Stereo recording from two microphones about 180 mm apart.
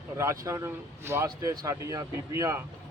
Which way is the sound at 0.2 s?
15° right (ahead or behind).